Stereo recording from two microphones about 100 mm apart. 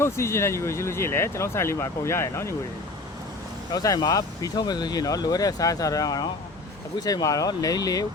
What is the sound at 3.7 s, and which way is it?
Speech, 40° left (ahead or behind).